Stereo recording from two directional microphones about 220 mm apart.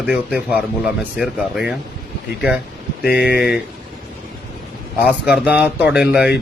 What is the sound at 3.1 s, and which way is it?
Speech, 45° left (ahead or behind).